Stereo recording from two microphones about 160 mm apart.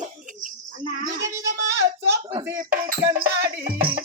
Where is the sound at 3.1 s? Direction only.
65° right (ahead or behind).